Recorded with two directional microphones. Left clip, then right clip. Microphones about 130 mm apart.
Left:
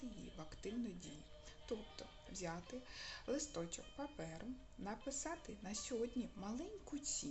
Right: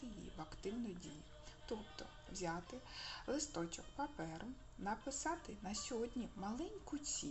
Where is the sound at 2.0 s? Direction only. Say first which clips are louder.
Right 2 dB; 20° left (ahead or behind).